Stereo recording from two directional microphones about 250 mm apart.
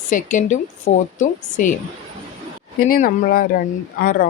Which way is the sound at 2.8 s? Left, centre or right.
Left.